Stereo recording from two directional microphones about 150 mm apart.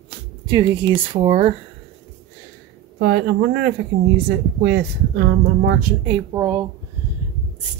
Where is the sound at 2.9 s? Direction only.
90° right.